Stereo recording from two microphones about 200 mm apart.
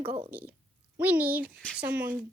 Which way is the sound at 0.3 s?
10° right (ahead or behind).